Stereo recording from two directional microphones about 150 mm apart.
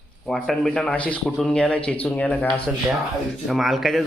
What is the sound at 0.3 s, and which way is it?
A man's voice, 5° left (ahead or behind).